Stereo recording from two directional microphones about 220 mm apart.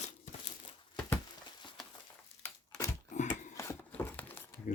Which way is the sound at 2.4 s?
10° left (ahead or behind).